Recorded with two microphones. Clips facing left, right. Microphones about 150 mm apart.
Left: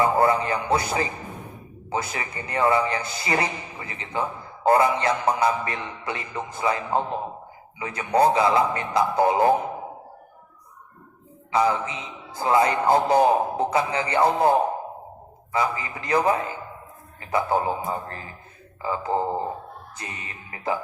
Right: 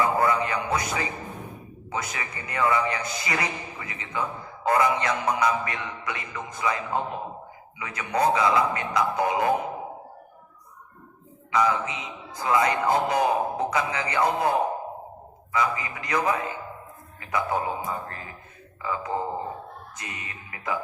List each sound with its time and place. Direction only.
0.0 s a man's voice: 30° left (ahead or behind)
11.5 s a man's voice: 30° left (ahead or behind)
15.5 s a man's voice: 30° left (ahead or behind)